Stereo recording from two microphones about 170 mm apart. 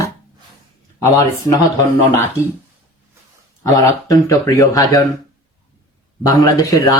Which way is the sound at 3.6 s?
20° left (ahead or behind).